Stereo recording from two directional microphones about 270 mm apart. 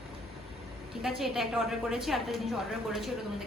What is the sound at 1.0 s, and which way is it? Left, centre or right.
A woman's voice, centre.